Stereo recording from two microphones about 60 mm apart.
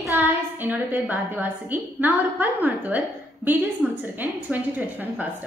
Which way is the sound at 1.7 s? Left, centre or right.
Right.